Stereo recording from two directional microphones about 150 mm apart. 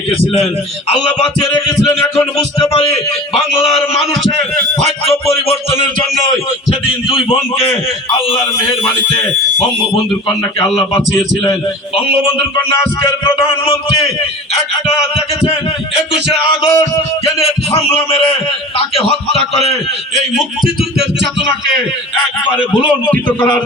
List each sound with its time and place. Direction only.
2.7 s a man's voice: 40° left (ahead or behind)
6.7 s a man's voice: 40° left (ahead or behind)
13.1 s a man's voice: 15° left (ahead or behind)
16.6 s music: 20° left (ahead or behind)
17.2 s a man's voice: 40° left (ahead or behind)
22.9 s a man's voice: 10° left (ahead or behind)